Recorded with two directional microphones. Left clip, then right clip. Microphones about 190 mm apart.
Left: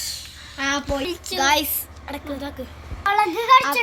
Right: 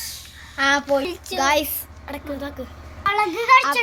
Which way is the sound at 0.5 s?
25° right (ahead or behind).